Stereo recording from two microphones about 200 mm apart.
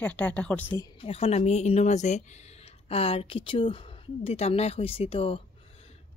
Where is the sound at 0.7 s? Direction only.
20° left (ahead or behind).